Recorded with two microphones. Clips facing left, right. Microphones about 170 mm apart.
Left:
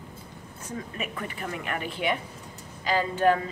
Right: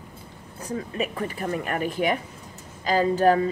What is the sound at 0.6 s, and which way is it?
A woman's voice, 35° right (ahead or behind).